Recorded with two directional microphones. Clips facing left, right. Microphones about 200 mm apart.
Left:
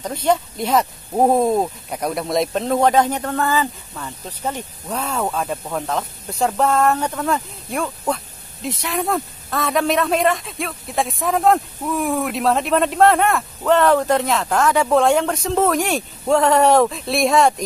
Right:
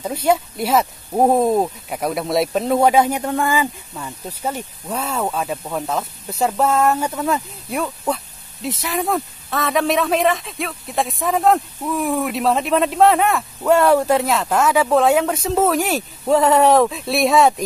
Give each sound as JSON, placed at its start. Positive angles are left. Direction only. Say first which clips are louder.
{"t": 0.0, "sound": "a man's voice", "louder": "right 1 dB", "side_deg": -10}